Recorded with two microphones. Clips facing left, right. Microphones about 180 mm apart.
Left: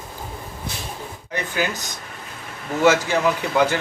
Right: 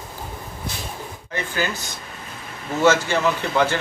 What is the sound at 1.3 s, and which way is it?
Speech, 15° left (ahead or behind).